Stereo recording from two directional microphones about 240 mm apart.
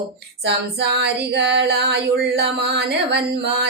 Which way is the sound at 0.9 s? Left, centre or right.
Right.